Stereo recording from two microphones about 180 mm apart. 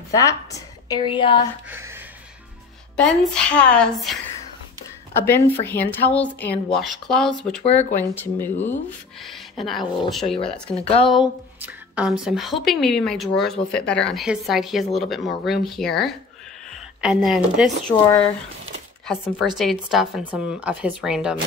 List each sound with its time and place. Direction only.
0.1 s a woman's voice: 20° left (ahead or behind)
1.7 s a sound: 10° right (ahead or behind)
3.0 s a woman's voice: 5° left (ahead or behind)
5.2 s speech: 10° left (ahead or behind)
7.6 s speech: 35° left (ahead or behind)
9.2 s a woman's voice: centre (ahead or behind)
10.3 s speech: 30° left (ahead or behind)
11.1 s a woman's voice: 5° right (ahead or behind)
19.0 s a woman's voice: centre (ahead or behind)